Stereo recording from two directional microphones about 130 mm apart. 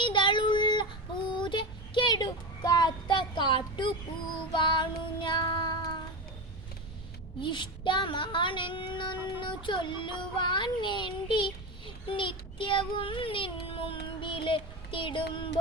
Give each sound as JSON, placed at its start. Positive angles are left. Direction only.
{"t": 0.0, "sound": "child singing", "side_deg": 40}
{"t": 7.4, "sound": "child singing", "side_deg": 40}